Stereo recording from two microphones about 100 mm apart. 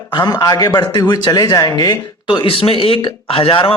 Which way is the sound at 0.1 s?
45° left (ahead or behind).